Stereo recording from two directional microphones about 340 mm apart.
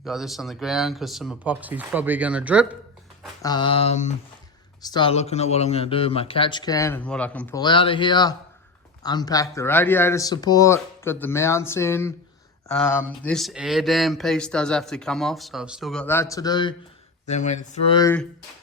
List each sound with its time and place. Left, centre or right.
0.0 s speech: centre
3.4 s speech: centre